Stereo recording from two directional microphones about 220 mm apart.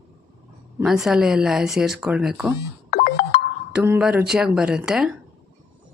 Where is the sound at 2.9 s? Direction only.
40° left (ahead or behind).